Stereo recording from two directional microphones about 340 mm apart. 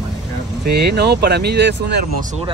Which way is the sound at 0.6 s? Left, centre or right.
Right.